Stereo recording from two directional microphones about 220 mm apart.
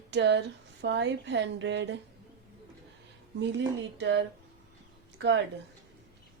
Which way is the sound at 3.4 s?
55° right (ahead or behind).